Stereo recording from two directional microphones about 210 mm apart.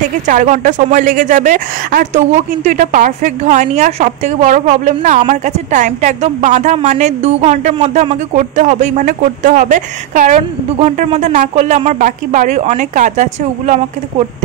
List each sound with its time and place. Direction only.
0.3 s speech: 35° right (ahead or behind)